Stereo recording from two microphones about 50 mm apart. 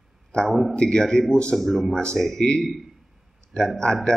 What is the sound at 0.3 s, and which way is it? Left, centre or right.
Speech, centre.